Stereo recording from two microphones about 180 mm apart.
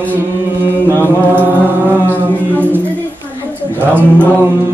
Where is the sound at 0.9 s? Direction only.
10° right (ahead or behind).